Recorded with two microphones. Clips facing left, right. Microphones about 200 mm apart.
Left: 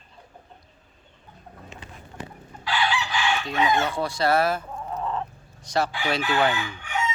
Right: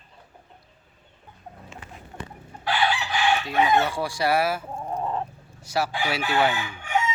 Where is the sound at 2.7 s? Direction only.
55° right (ahead or behind).